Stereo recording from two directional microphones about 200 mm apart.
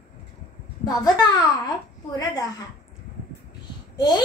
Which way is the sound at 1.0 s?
20° left (ahead or behind).